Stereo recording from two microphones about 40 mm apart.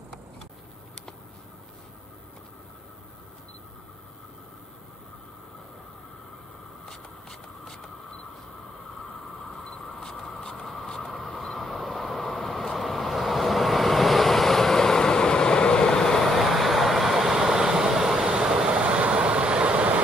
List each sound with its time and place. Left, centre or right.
6.9 s a sound: centre
9.9 s mouse: centre
11.1 s vehicle: centre
18.8 s vehicle: right